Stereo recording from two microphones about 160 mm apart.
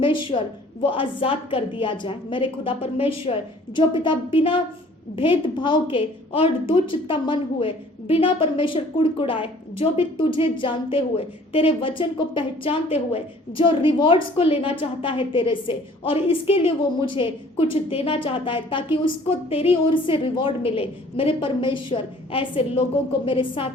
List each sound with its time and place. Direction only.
0.0 s a woman's voice: 30° left (ahead or behind)